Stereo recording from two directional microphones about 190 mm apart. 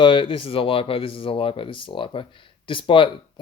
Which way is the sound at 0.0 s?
25° left (ahead or behind).